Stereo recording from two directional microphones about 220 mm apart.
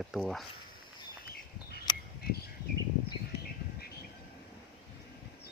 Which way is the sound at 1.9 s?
20° left (ahead or behind).